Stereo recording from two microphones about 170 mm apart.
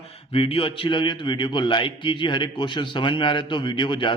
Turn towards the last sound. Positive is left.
turn(degrees=30)  # may be behind; listen again after turning